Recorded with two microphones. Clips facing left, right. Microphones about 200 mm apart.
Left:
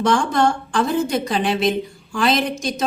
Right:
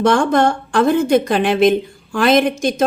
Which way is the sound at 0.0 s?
55° right (ahead or behind).